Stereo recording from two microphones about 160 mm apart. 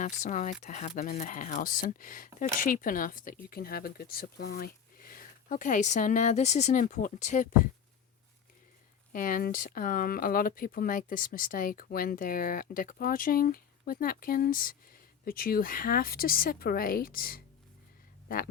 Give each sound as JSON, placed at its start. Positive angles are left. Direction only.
{"t": 0.0, "sound": "speech", "side_deg": 50}
{"t": 9.1, "sound": "speech", "side_deg": 60}